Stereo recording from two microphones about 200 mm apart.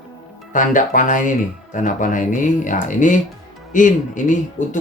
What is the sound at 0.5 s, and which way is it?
Speech, 40° left (ahead or behind).